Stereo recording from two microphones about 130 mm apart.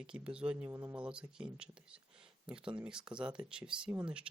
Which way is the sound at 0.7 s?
20° right (ahead or behind).